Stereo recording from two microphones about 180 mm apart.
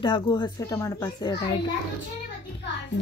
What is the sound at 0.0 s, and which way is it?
Speech, 25° left (ahead or behind).